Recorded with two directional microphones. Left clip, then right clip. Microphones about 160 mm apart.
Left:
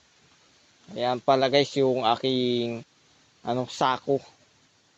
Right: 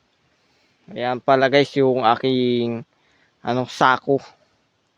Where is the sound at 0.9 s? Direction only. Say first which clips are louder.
Right 5 dB; 75° right (ahead or behind).